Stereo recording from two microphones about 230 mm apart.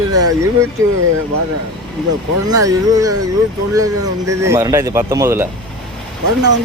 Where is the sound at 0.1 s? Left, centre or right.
Right.